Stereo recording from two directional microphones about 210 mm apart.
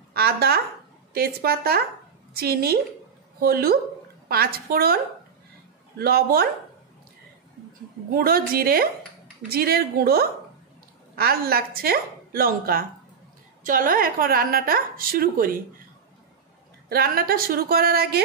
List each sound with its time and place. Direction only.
0.1 s a sound: 50° right (ahead or behind)
1.1 s a woman's voice: 45° right (ahead or behind)
5.9 s a woman's voice: 45° right (ahead or behind)
8.1 s a woman's voice: 45° right (ahead or behind)
16.9 s a woman's voice: 45° right (ahead or behind)